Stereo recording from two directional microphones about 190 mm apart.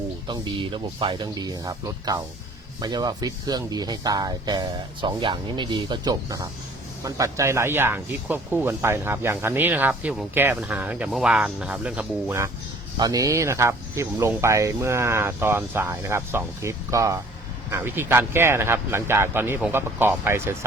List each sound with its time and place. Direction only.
0.3 s speech: 25° right (ahead or behind)